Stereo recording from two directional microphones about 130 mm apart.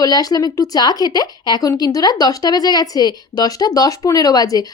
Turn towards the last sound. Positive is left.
turn(degrees=30)  # may be behind; listen again after turning